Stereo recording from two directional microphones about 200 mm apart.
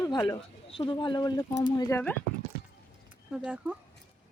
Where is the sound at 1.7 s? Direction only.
10° left (ahead or behind).